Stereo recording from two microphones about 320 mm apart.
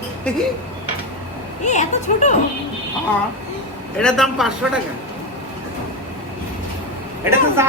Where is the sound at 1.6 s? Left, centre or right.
Left.